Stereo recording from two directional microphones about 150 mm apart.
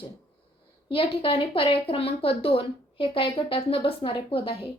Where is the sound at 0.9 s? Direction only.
35° left (ahead or behind).